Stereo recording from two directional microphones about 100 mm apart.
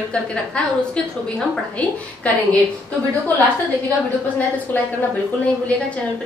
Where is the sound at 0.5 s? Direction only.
10° left (ahead or behind).